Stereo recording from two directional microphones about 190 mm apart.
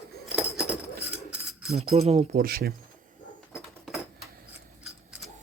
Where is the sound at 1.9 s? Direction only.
35° right (ahead or behind).